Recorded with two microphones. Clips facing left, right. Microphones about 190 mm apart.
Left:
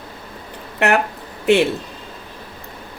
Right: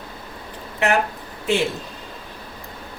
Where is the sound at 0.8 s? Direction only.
65° left (ahead or behind).